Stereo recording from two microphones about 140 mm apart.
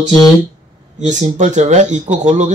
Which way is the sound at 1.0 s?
60° right (ahead or behind).